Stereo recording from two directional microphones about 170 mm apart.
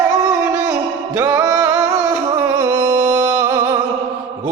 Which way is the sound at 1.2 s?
15° right (ahead or behind).